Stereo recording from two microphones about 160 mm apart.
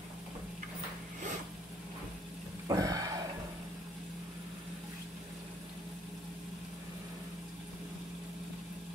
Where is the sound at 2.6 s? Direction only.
20° right (ahead or behind).